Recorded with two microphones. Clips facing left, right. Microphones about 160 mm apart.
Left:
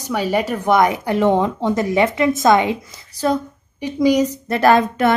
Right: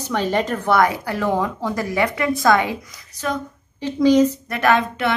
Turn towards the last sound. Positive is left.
turn(degrees=40)  # may be behind; listen again after turning